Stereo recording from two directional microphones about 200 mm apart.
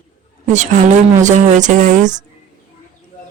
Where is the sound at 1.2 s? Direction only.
35° right (ahead or behind).